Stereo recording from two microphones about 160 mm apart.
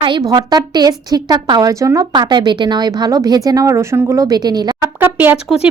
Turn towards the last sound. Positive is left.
turn(degrees=-5)  # may be behind; listen again after turning